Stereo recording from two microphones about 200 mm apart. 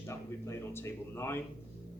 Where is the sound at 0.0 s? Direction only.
15° left (ahead or behind).